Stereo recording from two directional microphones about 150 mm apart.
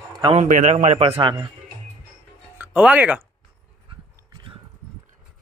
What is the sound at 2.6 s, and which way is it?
Speech, 10° right (ahead or behind).